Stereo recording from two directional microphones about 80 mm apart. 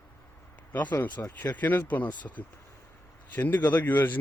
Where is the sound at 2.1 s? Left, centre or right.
Left.